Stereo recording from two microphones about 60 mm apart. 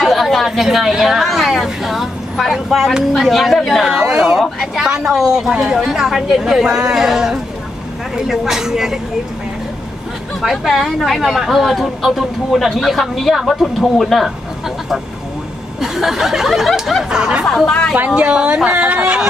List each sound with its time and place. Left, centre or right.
0.0 s chatter: centre
0.5 s a woman's voice: centre
3.8 s speech: centre
4.4 s a woman's voice: centre
10.4 s a woman's voice: centre
15.8 s a woman's voice: centre
17.6 s a woman's voice: centre
17.9 s a woman's voice: right